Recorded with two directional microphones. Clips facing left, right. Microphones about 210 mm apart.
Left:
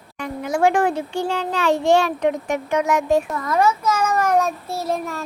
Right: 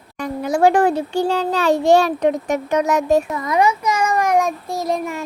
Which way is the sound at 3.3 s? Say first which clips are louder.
Right 1 dB; 15° right (ahead or behind).